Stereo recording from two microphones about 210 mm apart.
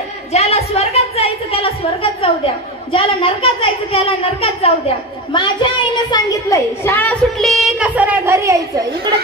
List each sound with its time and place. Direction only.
0.3 s a woman's voice: 30° left (ahead or behind)
2.9 s a woman's voice: 25° left (ahead or behind); by 8.6 s 15° right (ahead or behind)